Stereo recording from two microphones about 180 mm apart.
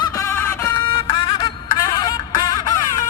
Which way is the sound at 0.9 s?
25° left (ahead or behind).